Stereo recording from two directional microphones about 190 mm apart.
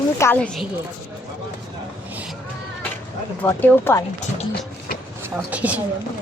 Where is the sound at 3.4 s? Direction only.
15° left (ahead or behind).